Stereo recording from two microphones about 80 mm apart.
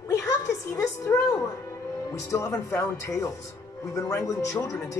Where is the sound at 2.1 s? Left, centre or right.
Left.